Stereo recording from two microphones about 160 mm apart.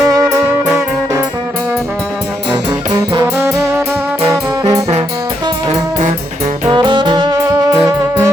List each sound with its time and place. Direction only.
0.0 s music: 20° right (ahead or behind)
2.5 s music: 25° right (ahead or behind)
3.4 s music: 10° right (ahead or behind)
4.3 s trombone: 20° right (ahead or behind)
6.7 s music: 30° right (ahead or behind)